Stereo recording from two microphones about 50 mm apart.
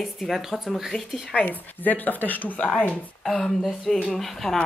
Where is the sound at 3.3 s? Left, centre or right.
Centre.